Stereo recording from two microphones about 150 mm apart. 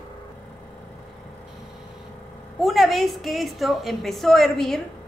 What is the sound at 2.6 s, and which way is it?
A woman's voice, centre (ahead or behind).